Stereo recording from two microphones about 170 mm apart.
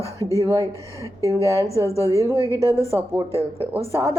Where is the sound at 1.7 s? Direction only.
15° left (ahead or behind).